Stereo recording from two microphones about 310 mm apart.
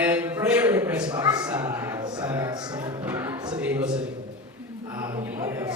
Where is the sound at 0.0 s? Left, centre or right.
Centre.